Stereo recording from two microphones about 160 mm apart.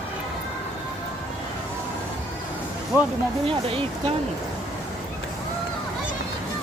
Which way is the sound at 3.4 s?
35° right (ahead or behind).